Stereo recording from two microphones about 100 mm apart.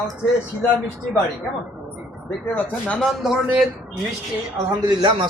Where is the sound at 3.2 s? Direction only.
5° right (ahead or behind).